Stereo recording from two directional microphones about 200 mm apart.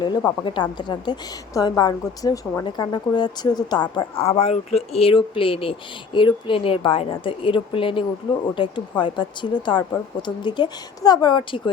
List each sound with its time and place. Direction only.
0.3 s a woman's voice: 20° left (ahead or behind)